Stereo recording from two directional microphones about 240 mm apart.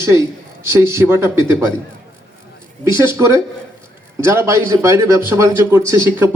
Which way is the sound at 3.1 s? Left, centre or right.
Centre.